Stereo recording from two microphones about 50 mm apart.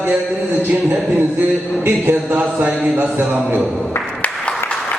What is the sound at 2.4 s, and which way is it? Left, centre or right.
Speech, right.